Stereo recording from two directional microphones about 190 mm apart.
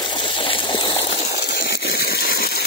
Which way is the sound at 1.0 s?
30° left (ahead or behind).